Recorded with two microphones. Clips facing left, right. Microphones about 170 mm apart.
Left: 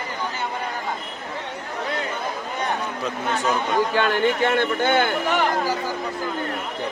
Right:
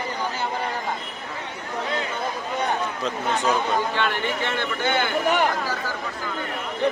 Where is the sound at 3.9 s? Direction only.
50° left (ahead or behind).